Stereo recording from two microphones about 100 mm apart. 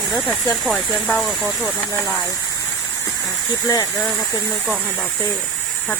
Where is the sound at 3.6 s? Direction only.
40° left (ahead or behind).